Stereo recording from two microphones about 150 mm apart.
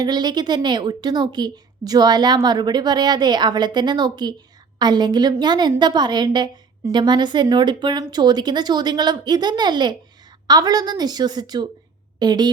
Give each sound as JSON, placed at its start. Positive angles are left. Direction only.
{"t": 0.0, "sound": "a woman's voice", "side_deg": -25}